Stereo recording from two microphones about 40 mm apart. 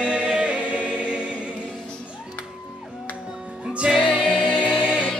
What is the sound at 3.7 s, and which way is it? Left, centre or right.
Music, right.